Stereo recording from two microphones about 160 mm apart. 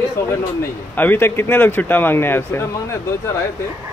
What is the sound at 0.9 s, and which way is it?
Speech, 10° left (ahead or behind).